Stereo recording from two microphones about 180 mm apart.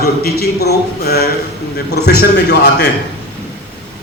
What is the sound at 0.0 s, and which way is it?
A man's voice, 60° left (ahead or behind).